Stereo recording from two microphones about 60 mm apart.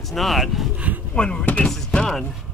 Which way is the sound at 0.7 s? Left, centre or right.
Right.